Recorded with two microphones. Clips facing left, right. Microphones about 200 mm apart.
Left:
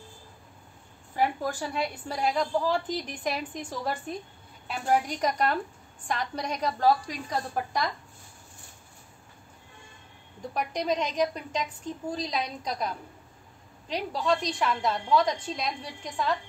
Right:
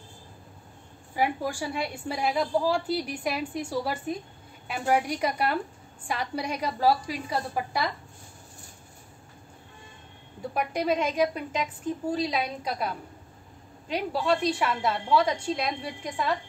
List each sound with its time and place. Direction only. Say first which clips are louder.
1.1 s a woman's voice: even; 10° right (ahead or behind)
10.5 s a woman's voice: right 2 dB; 5° right (ahead or behind)